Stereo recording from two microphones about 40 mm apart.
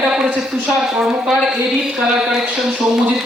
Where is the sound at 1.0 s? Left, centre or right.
Centre.